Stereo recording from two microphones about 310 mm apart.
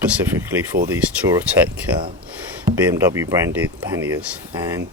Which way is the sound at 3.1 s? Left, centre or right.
Centre.